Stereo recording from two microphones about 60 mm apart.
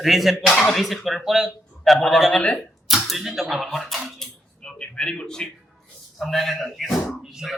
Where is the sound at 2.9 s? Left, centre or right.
Centre.